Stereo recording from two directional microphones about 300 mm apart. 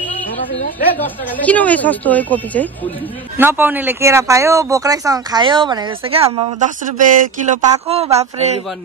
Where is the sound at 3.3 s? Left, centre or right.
Centre.